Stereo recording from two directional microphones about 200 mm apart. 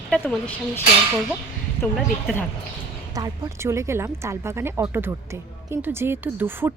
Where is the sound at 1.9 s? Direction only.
Centre (ahead or behind).